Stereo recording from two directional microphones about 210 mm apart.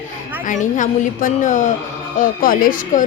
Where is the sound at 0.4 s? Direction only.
35° left (ahead or behind).